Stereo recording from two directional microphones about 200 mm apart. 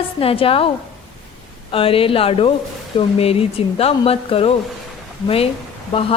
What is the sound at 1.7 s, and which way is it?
A woman's voice, 25° left (ahead or behind).